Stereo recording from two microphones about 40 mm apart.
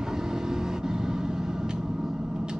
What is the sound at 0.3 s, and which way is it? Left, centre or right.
Vehicle, centre.